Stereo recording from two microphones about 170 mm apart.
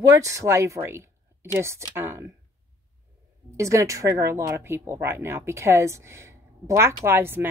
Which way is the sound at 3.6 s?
20° right (ahead or behind).